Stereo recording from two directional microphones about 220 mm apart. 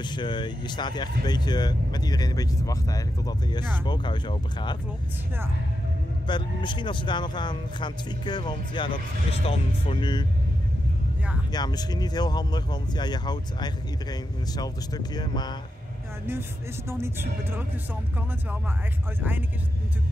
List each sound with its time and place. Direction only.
0.0 s speech: 20° left (ahead or behind)
6.2 s speech: 20° left (ahead or behind)
11.5 s speech: 20° left (ahead or behind)
17.0 s speech: 10° right (ahead or behind)